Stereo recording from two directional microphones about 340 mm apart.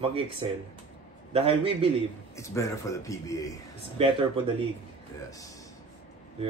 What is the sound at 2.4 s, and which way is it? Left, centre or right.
Speech, centre.